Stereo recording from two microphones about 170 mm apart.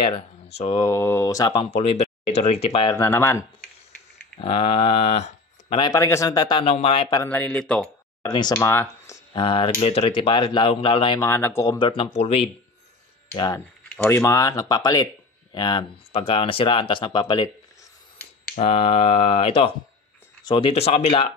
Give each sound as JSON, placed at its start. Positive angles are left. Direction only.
{"t": 0.7, "sound": "speech", "side_deg": 15}
{"t": 1.5, "sound": "speech", "side_deg": 35}
{"t": 3.1, "sound": "speech", "side_deg": 15}
{"t": 4.4, "sound": "speech", "side_deg": 30}
{"t": 5.9, "sound": "speech", "side_deg": 20}
{"t": 6.6, "sound": "speech", "side_deg": 35}
{"t": 7.2, "sound": "speech", "side_deg": 10}
{"t": 8.2, "sound": "speech", "side_deg": 25}
{"t": 8.5, "sound": "speech", "side_deg": 15}
{"t": 11.1, "sound": "speech", "side_deg": 15}
{"t": 12.0, "sound": "speech", "side_deg": 40}
{"t": 13.8, "sound": "speech", "side_deg": 5}
{"t": 14.2, "sound": "speech", "side_deg": 20}
{"t": 18.6, "sound": "speech", "side_deg": 35}